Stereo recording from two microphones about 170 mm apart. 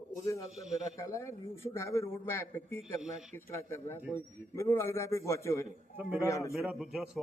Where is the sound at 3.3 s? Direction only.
15° left (ahead or behind).